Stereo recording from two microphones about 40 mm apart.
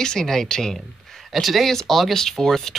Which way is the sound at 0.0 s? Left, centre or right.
Centre.